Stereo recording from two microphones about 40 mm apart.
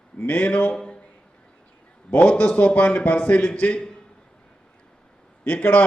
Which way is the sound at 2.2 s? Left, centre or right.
Left.